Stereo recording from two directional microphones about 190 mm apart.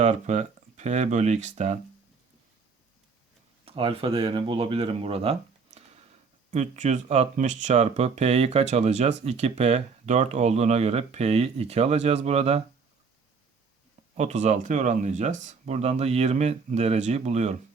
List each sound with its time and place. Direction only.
0.0 s speech: 40° right (ahead or behind)
3.7 s speech: 30° right (ahead or behind)
14.2 s speech: 35° right (ahead or behind)